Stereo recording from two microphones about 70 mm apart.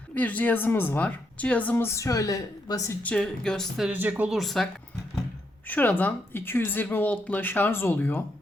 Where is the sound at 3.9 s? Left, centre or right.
Right.